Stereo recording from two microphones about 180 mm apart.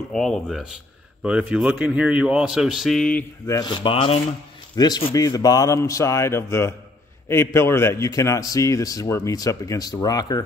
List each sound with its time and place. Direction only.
0.1 s a man's voice: centre (ahead or behind)
3.5 s a man's voice: 25° left (ahead or behind)